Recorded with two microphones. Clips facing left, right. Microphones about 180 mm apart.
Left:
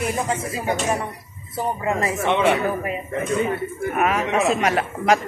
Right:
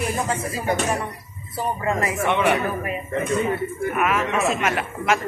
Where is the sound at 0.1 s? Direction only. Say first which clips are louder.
Left 1 dB; 20° left (ahead or behind).